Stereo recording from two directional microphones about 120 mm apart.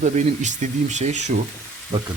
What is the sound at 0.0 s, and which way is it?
Speech, 85° right.